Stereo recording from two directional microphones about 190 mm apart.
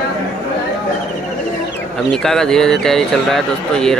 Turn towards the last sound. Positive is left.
turn(degrees=5)  # may be behind; listen again after turning